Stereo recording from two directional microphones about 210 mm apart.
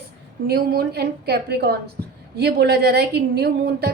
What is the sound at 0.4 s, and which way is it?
A woman's voice, 50° right (ahead or behind).